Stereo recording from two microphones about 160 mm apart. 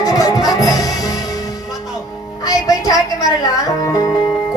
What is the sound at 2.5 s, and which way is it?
Speech, 20° left (ahead or behind).